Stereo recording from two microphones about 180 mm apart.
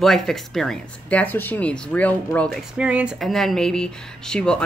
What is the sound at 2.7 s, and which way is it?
A woman's voice, 5° right (ahead or behind).